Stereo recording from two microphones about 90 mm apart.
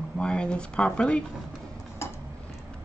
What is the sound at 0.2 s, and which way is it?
Speech, 10° left (ahead or behind).